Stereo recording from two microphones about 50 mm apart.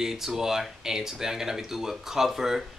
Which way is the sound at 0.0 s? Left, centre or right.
Centre.